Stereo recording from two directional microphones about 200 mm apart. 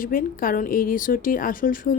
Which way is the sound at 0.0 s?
45° left (ahead or behind).